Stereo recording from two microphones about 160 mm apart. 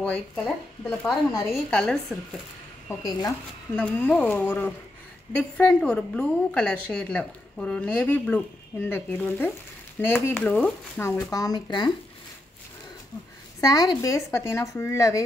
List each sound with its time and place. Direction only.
0.0 s a woman's voice: 10° left (ahead or behind)
2.9 s speech: 25° left (ahead or behind)
3.7 s a woman's voice: 10° left (ahead or behind); by 11.9 s 25° left (ahead or behind)
13.6 s speech: 25° left (ahead or behind)